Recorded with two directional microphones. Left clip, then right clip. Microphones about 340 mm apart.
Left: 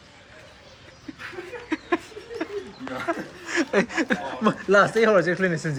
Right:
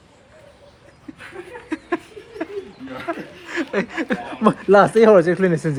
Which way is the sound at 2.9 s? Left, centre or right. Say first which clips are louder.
Even; centre.